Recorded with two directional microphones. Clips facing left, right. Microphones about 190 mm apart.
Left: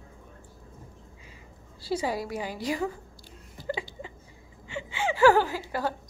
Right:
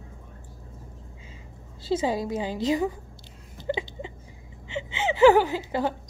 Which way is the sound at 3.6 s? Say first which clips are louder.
Right 4 dB; 25° right (ahead or behind).